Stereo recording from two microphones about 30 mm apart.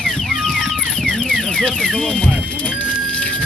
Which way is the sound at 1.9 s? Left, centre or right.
Left.